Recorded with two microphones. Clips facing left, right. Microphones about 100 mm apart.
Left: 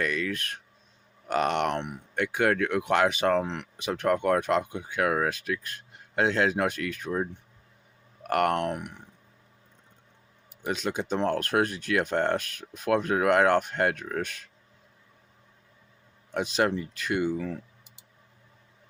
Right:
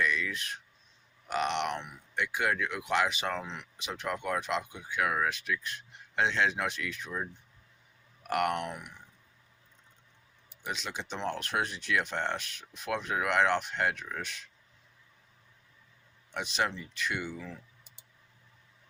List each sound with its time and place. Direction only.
0.0 s speech: 50° left (ahead or behind)
4.8 s speech: 30° left (ahead or behind); by 9.0 s 60° left (ahead or behind)
10.7 s speech: 45° left (ahead or behind)
16.3 s speech: 40° left (ahead or behind)
17.1 s speech: 50° left (ahead or behind)